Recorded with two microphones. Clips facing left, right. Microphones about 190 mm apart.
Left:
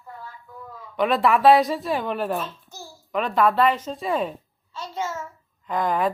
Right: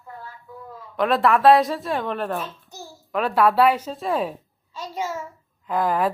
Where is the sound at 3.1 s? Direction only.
5° right (ahead or behind).